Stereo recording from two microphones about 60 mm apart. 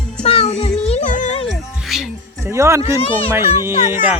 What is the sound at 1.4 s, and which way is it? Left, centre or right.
Music, centre.